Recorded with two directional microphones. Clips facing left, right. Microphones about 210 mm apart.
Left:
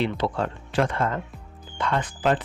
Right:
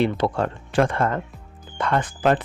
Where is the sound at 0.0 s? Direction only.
50° right (ahead or behind).